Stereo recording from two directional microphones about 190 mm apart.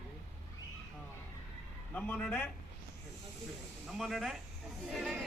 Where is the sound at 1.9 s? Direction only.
10° left (ahead or behind).